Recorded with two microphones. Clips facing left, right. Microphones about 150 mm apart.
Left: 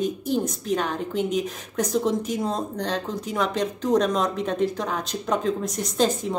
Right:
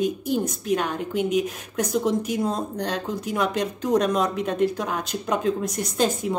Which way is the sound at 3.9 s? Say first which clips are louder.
Even; 5° right (ahead or behind).